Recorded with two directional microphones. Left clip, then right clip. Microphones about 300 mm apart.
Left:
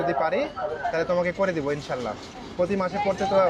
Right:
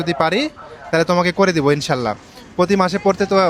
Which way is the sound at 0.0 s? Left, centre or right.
Right.